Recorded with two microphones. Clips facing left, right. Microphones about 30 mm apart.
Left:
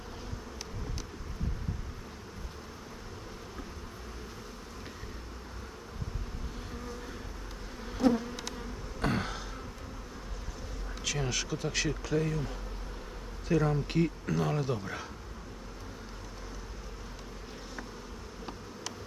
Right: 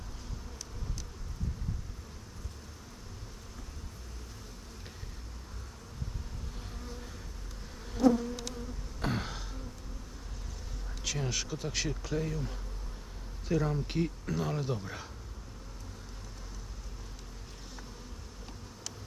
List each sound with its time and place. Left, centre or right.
8.1 s bee: centre
9.0 s a sound: centre
11.3 s speech: centre
13.5 s speech: centre